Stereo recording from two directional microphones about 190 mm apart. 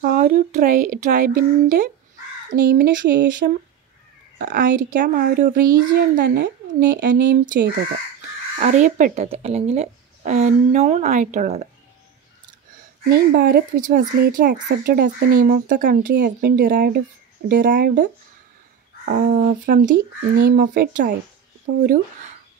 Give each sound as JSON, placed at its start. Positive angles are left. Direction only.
{"t": 0.0, "sound": "a child's voice", "side_deg": -50}
{"t": 13.1, "sound": "a child's voice", "side_deg": -55}
{"t": 19.0, "sound": "a child's voice", "side_deg": -50}